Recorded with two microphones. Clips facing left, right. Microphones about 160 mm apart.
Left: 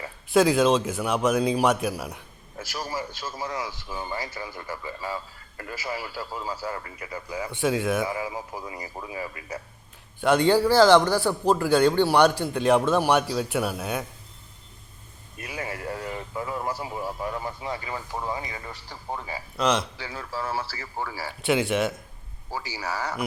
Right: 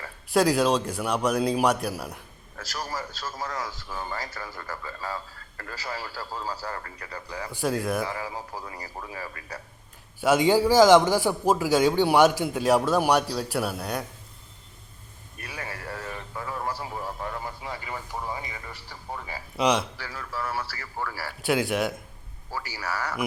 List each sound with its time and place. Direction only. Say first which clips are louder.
0.3 s speech: left 2 dB; centre (ahead or behind)
2.6 s a man's voice: left 2 dB; 20° left (ahead or behind)
7.5 s speech: left 2 dB; centre (ahead or behind)
8.1 s a man's voice: left 3 dB; 15° left (ahead or behind)
10.2 s a man's voice: left 1 dB; 5° right (ahead or behind)
15.4 s a man's voice: left 4 dB; 20° left (ahead or behind)
19.5 s a man's voice: right 1 dB; 10° right (ahead or behind)
20.0 s a man's voice: left 1 dB; 25° left (ahead or behind)
21.4 s speech: left 1 dB; centre (ahead or behind)
22.5 s a man's voice: left 1 dB; 20° left (ahead or behind)